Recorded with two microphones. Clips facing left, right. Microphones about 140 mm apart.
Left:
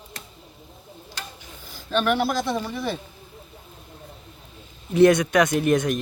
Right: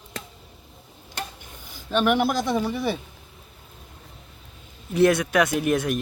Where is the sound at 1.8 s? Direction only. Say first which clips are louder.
Right 1 dB; 15° right (ahead or behind).